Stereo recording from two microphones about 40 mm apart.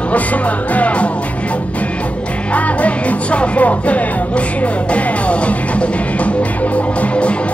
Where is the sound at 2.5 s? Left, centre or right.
Left.